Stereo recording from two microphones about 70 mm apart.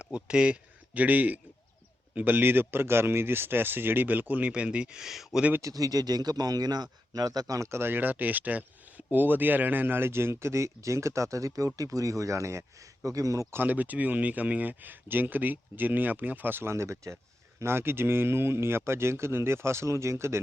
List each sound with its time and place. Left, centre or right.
0.0 s speech: centre
5.5 s speech: right
7.7 s a man's voice: right
13.5 s speech: right
16.7 s a man's voice: right